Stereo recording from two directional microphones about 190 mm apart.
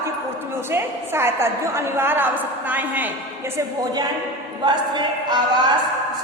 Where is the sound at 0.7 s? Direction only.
10° right (ahead or behind).